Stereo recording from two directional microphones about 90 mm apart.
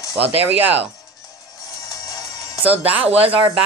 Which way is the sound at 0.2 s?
20° right (ahead or behind).